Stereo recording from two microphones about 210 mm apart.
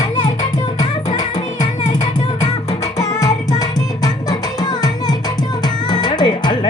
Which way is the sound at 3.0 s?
15° left (ahead or behind).